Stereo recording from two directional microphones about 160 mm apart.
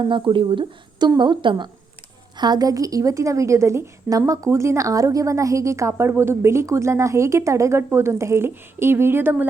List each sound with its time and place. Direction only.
0.0 s a woman's voice: 30° right (ahead or behind); by 9.5 s 15° right (ahead or behind)